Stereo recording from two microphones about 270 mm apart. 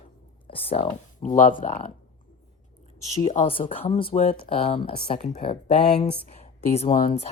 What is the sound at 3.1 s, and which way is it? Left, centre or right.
Speech, left.